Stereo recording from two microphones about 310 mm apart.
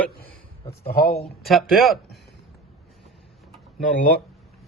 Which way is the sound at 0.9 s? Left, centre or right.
Left.